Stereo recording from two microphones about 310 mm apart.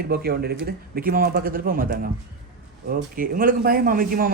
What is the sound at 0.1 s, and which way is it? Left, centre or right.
Speech, right.